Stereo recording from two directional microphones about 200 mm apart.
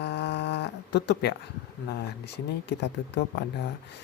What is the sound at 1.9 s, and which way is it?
Speech, 60° left (ahead or behind).